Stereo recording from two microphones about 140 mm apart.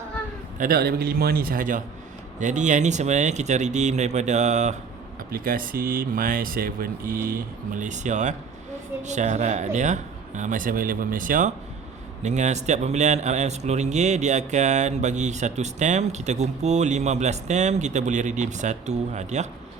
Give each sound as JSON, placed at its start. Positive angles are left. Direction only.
{"t": 0.6, "sound": "speech", "side_deg": -90}
{"t": 2.4, "sound": "a man's voice", "side_deg": -60}
{"t": 5.3, "sound": "speech", "side_deg": -90}
{"t": 7.3, "sound": "a man's voice", "side_deg": -75}
{"t": 12.2, "sound": "a man's voice", "side_deg": -55}